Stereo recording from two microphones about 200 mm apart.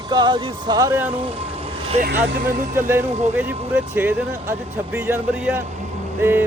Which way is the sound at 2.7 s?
10° right (ahead or behind).